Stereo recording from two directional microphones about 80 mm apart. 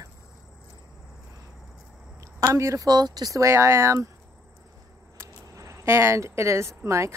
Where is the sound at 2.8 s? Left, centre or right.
Right.